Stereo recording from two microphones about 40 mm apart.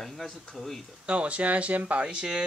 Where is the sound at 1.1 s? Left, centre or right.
Right.